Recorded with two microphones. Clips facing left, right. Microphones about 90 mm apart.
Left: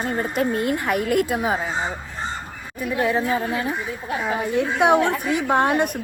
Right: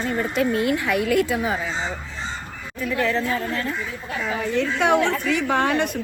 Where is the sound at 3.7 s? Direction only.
55° left (ahead or behind).